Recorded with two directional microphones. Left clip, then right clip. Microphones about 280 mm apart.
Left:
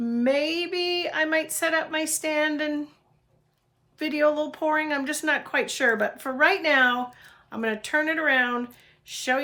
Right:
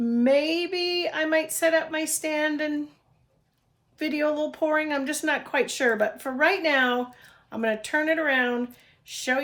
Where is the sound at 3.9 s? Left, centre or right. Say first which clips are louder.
Left 3 dB; centre.